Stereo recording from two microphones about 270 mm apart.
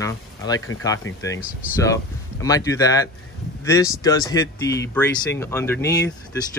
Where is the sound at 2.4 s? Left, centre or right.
Centre.